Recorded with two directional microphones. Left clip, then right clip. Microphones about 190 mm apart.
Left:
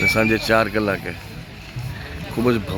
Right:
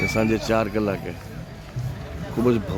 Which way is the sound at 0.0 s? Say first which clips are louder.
Left 5 dB; 5° right (ahead or behind).